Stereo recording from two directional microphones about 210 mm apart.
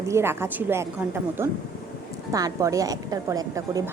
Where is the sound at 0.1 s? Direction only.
10° right (ahead or behind).